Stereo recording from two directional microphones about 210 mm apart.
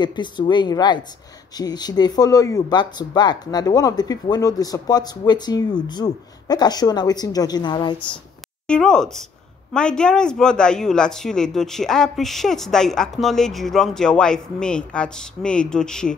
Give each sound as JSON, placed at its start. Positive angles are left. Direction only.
{"t": 0.0, "sound": "speech", "side_deg": 20}
{"t": 8.6, "sound": "speech", "side_deg": 5}